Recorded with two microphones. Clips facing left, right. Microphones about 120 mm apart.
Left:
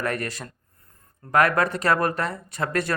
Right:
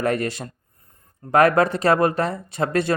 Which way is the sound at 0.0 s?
25° right (ahead or behind).